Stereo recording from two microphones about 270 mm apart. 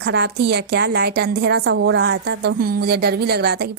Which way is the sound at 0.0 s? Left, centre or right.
Right.